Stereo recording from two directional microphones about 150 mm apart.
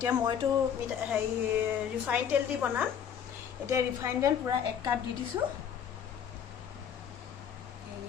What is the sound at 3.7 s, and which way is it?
Speech, 20° right (ahead or behind).